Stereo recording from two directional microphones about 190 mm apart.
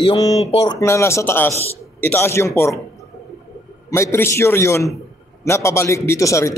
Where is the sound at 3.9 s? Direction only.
15° left (ahead or behind).